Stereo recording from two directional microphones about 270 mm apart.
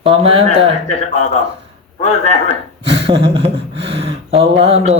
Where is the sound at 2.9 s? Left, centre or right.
Centre.